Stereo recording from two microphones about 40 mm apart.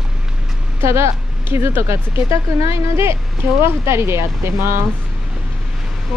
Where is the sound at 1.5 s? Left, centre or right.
Right.